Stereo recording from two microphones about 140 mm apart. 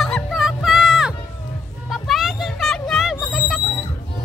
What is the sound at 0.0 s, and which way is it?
Music, centre (ahead or behind).